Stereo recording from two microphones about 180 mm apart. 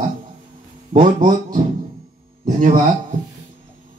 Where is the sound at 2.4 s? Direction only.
50° right (ahead or behind).